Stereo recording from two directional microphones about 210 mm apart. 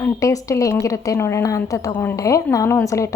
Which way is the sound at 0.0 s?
15° left (ahead or behind).